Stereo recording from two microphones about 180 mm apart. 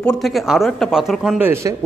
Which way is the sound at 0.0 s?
Centre (ahead or behind).